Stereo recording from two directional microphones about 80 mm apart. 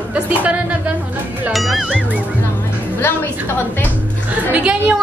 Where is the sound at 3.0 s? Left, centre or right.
Left.